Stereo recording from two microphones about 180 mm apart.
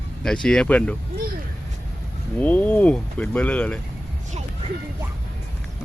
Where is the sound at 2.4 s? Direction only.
10° left (ahead or behind).